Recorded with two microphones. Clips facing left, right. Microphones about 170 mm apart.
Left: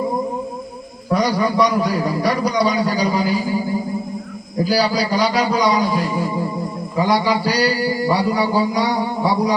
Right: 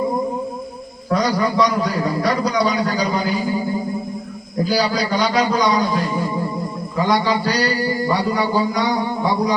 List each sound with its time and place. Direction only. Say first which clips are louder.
1.2 s a man's voice: left 1 dB; 10° left (ahead or behind)
4.6 s a man's voice: left 1 dB; 5° left (ahead or behind)